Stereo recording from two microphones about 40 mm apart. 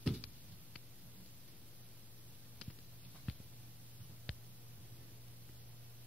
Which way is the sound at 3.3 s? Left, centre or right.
Centre.